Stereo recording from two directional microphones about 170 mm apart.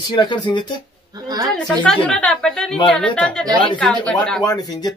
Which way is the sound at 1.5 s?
Centre (ahead or behind).